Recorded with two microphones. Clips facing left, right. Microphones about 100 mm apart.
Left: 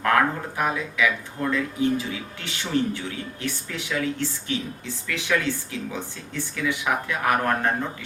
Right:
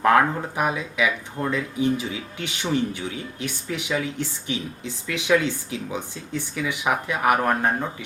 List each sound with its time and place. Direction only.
0.0 s speech: 20° right (ahead or behind)